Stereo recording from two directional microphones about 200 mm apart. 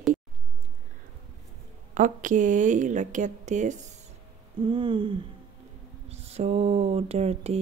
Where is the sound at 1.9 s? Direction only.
40° right (ahead or behind).